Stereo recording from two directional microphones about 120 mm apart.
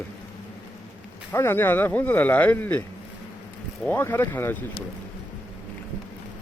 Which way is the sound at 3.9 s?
20° left (ahead or behind).